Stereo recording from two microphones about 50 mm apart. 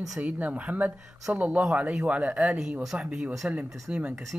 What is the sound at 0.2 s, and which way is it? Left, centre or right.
Speech, right.